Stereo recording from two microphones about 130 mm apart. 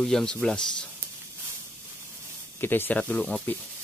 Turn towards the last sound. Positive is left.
turn(degrees=10)  # may be behind; listen again after turning